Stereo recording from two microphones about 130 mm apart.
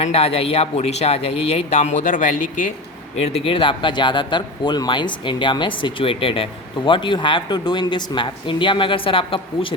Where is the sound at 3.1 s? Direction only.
50° left (ahead or behind).